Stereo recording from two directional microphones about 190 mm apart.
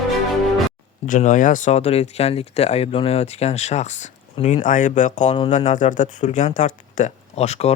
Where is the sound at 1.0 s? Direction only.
45° left (ahead or behind).